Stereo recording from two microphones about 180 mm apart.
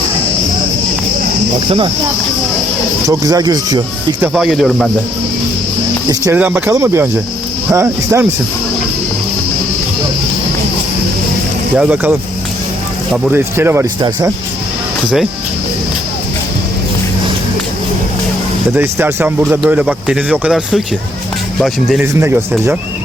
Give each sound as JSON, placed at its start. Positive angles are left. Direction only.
{"t": 1.5, "sound": "speech", "side_deg": -25}
{"t": 3.1, "sound": "speech", "side_deg": -20}
{"t": 4.2, "sound": "speech", "side_deg": 0}
{"t": 6.1, "sound": "speech", "side_deg": -15}
{"t": 11.8, "sound": "speech", "side_deg": -10}
{"t": 13.2, "sound": "speech", "side_deg": -10}
{"t": 18.7, "sound": "speech", "side_deg": -15}
{"t": 22.0, "sound": "speech", "side_deg": -15}